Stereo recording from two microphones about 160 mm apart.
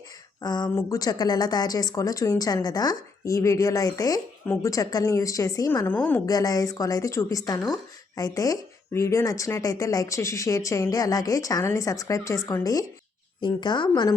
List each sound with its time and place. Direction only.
0.4 s speech: 25° left (ahead or behind)
6.2 s speech: 20° left (ahead or behind)